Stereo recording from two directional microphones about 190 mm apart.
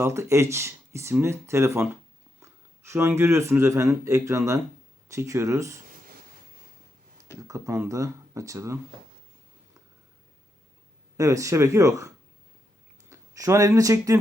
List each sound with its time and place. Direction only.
0.0 s speech: 15° right (ahead or behind)
7.4 s speech: 15° right (ahead or behind)
11.2 s speech: 15° right (ahead or behind)